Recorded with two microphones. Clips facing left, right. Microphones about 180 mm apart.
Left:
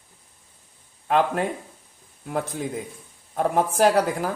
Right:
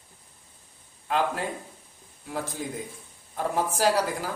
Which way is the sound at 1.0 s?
55° left (ahead or behind).